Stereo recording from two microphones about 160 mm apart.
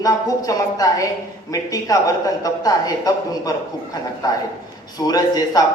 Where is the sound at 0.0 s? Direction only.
20° left (ahead or behind).